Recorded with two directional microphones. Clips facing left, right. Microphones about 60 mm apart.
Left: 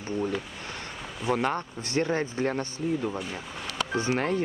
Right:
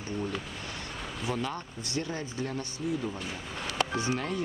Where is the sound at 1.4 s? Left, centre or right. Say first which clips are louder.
Left 6 dB; left.